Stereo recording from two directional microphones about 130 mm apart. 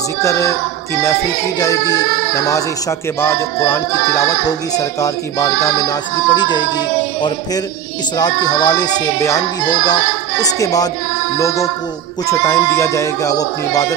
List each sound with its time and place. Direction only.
0.2 s speech: 25° left (ahead or behind)
1.6 s speech: 30° left (ahead or behind)
3.2 s a sound: 20° left (ahead or behind)
4.5 s speech: 25° left (ahead or behind)